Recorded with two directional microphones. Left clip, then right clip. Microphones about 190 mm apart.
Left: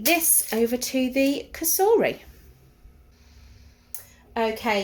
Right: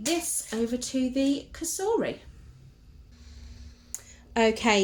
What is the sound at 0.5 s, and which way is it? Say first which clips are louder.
Speech: left 6 dB; 35° left (ahead or behind).